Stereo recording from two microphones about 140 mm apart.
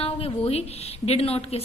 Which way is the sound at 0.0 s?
45° left (ahead or behind).